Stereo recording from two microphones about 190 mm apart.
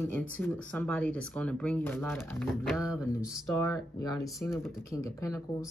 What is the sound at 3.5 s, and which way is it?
Speech, 20° left (ahead or behind).